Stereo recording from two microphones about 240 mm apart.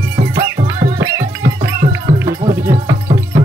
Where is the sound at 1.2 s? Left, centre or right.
Right.